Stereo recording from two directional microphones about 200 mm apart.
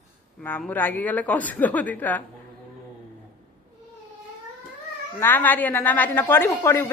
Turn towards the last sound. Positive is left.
turn(degrees=15)  # may be behind; listen again after turning